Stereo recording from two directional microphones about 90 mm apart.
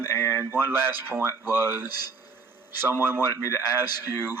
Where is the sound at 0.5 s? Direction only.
25° right (ahead or behind).